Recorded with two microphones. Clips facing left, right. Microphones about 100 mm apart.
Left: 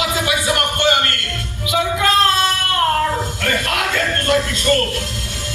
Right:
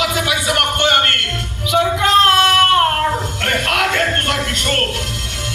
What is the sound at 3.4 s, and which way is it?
Music, 65° right (ahead or behind).